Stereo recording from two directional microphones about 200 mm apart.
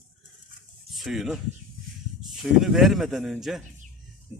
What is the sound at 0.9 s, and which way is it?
Speech, centre (ahead or behind).